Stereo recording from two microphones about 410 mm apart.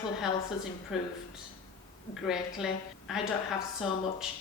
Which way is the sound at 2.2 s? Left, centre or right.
Centre.